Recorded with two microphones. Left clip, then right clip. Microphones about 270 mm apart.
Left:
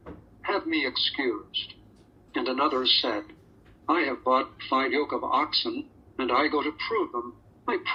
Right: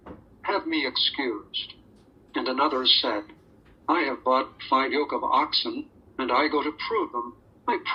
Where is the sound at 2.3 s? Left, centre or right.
Centre.